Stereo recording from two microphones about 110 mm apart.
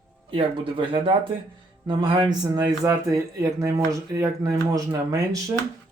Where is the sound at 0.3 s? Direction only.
50° right (ahead or behind); by 5.5 s 30° right (ahead or behind).